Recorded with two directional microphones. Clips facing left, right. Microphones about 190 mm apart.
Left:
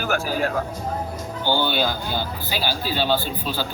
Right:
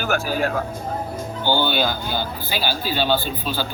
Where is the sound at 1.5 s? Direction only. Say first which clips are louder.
Right 1 dB; 65° right (ahead or behind).